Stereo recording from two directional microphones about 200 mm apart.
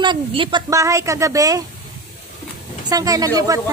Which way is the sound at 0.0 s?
25° right (ahead or behind).